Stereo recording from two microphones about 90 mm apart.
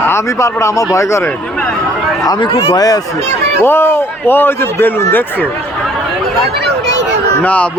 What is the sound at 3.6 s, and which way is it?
A man's voice, 25° left (ahead or behind).